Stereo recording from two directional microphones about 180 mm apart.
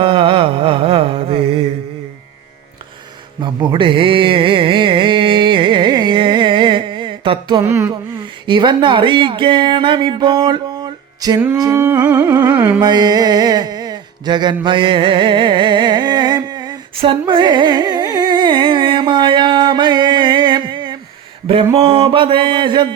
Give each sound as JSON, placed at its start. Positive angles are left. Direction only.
{"t": 0.0, "sound": "mantra", "side_deg": -30}
{"t": 3.4, "sound": "music", "side_deg": -25}
{"t": 7.7, "sound": "music", "side_deg": -15}
{"t": 8.4, "sound": "speech", "side_deg": -25}
{"t": 11.5, "sound": "music", "side_deg": -20}
{"t": 12.8, "sound": "music", "side_deg": -25}
{"t": 21.4, "sound": "a sound", "side_deg": -30}